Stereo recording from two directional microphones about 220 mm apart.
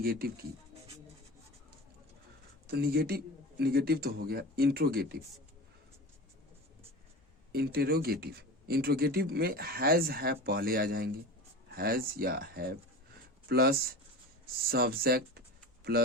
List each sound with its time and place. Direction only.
0.0 s speech: 45° right (ahead or behind)
2.6 s speech: 45° right (ahead or behind)
7.5 s speech: 45° right (ahead or behind)